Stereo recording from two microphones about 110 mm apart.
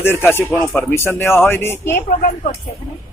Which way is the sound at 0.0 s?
20° left (ahead or behind).